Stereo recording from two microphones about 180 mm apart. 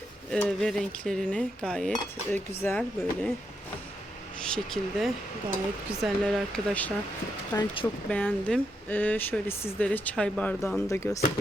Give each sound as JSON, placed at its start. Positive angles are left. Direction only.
{"t": 0.3, "sound": "dishes", "side_deg": 5}
{"t": 2.3, "sound": "speech", "side_deg": 15}
{"t": 4.4, "sound": "dishes", "side_deg": 5}
{"t": 7.5, "sound": "speech", "side_deg": 30}
{"t": 8.1, "sound": "speech", "side_deg": 5}